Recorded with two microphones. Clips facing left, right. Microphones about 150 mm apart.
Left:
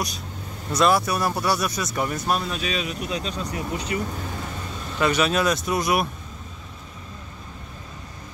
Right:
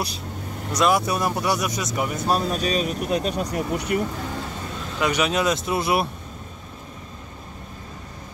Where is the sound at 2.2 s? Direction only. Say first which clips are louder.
Right 3 dB; 40° right (ahead or behind); by 4.0 s 65° right (ahead or behind).